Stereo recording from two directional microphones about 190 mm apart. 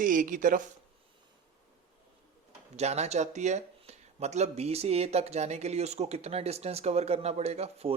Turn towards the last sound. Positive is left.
turn(degrees=-35)  # may be behind; listen again after turning